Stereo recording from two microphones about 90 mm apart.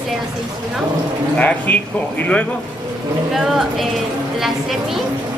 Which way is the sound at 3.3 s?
5° right (ahead or behind).